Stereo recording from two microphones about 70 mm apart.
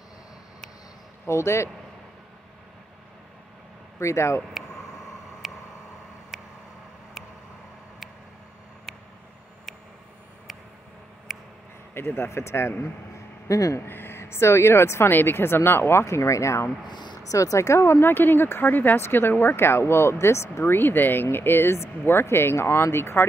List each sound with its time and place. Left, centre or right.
1.2 s speech: left
4.0 s speech: left
5.4 s a sound: centre
6.3 s vehicle: centre
11.3 s a sound: centre
11.9 s speech: left
13.5 s speech: left
13.8 s speech: left
16.8 s speech: left
17.3 s speech: left